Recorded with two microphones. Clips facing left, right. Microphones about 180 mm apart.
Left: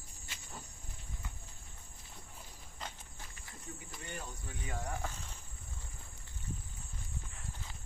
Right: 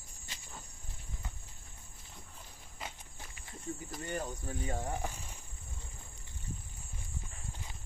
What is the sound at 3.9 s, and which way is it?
Cricket, 40° right (ahead or behind).